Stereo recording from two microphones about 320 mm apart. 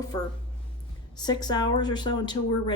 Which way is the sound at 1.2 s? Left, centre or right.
Centre.